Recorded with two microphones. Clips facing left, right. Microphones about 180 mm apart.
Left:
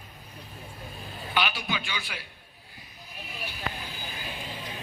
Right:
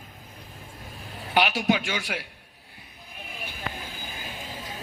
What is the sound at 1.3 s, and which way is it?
Speech, 75° right (ahead or behind).